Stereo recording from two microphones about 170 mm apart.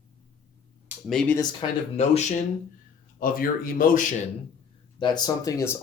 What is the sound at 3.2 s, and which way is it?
Speech, 55° left (ahead or behind).